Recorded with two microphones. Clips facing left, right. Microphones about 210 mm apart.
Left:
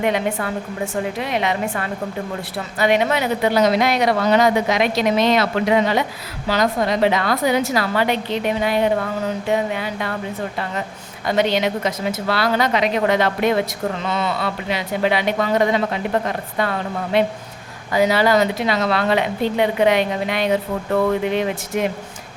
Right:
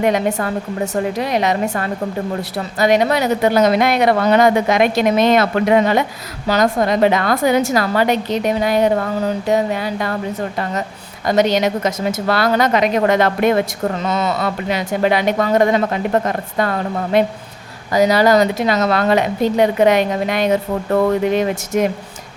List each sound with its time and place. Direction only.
0.0 s a woman's voice: 45° right (ahead or behind)
11.3 s a woman's voice: 40° right (ahead or behind)